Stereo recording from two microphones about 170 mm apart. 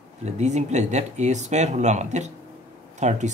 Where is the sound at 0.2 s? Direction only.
40° right (ahead or behind).